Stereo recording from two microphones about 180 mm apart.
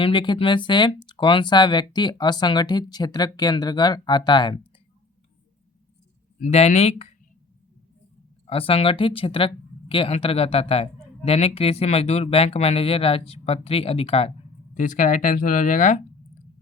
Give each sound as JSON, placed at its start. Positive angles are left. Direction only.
{"t": 0.0, "sound": "speech", "side_deg": 25}
{"t": 6.4, "sound": "speech", "side_deg": 35}
{"t": 8.4, "sound": "speech", "side_deg": 30}
{"t": 14.8, "sound": "speech", "side_deg": 45}